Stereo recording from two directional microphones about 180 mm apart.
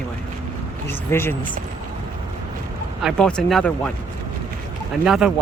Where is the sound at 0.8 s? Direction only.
15° left (ahead or behind).